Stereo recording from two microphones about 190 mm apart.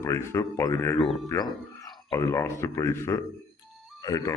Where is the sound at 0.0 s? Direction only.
15° left (ahead or behind).